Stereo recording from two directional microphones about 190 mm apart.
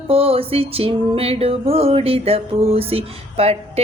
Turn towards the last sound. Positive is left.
turn(degrees=-30)  # may be behind; listen again after turning